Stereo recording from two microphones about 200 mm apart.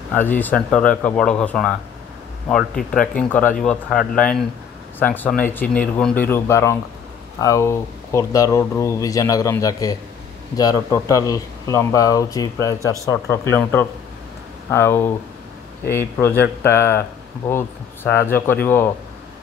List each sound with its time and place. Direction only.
0.1 s speech: 10° left (ahead or behind)